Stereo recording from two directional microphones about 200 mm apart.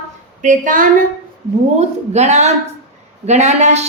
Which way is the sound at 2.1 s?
35° right (ahead or behind).